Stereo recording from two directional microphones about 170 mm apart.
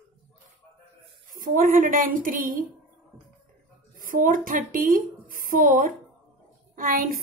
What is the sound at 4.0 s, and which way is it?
A woman's voice, 55° right (ahead or behind).